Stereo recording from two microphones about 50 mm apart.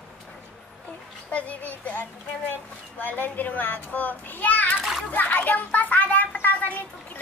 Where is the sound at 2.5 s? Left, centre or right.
Left.